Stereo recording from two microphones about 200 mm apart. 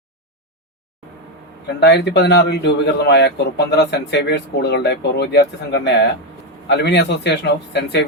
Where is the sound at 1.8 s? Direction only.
55° left (ahead or behind).